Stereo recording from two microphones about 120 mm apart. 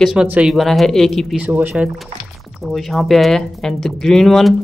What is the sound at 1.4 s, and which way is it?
Speech, 15° right (ahead or behind).